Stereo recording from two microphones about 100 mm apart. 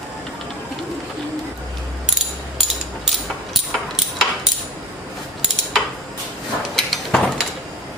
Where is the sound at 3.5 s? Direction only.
Centre (ahead or behind).